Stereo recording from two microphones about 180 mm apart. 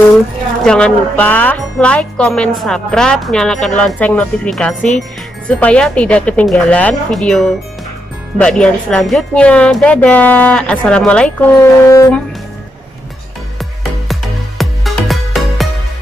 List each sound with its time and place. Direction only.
0.7 s speech: 5° left (ahead or behind)
11.8 s speech: 15° left (ahead or behind)
14.6 s music: centre (ahead or behind)